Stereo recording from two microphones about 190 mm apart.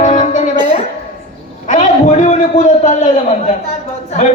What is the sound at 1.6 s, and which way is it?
A man's voice, 40° left (ahead or behind).